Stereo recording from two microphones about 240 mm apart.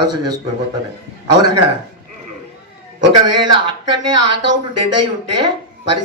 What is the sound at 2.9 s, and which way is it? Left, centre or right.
Speech, right.